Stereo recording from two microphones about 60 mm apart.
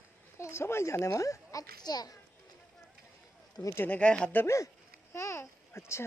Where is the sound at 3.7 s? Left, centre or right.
Left.